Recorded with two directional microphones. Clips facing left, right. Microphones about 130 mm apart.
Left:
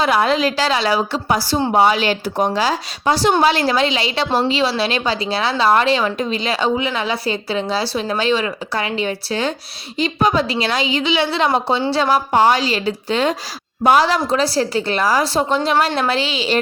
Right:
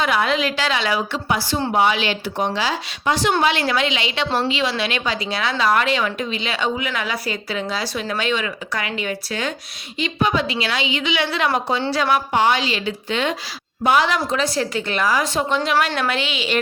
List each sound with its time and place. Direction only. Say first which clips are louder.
0.0 s a woman's voice: left 4 dB; 35° left (ahead or behind)